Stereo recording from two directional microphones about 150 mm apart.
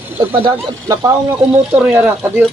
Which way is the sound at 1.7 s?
10° right (ahead or behind).